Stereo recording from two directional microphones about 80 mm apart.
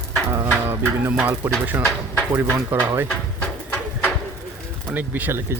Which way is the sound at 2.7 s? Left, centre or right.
Right.